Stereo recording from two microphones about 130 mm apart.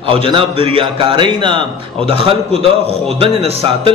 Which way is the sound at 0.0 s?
40° right (ahead or behind).